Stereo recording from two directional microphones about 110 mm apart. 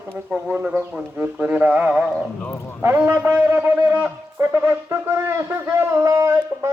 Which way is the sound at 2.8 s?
20° right (ahead or behind).